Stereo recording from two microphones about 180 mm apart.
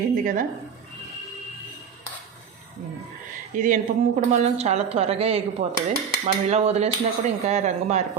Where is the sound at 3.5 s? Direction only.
45° right (ahead or behind).